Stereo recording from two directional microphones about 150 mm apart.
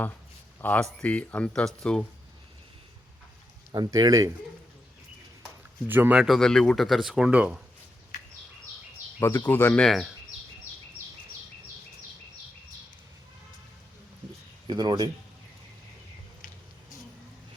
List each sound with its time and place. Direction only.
0.6 s speech: 10° left (ahead or behind)
3.7 s speech: 30° right (ahead or behind)
5.9 s speech: 10° right (ahead or behind)
9.5 s speech: 15° left (ahead or behind)
9.8 s speech: centre (ahead or behind)
14.7 s speech: 30° right (ahead or behind)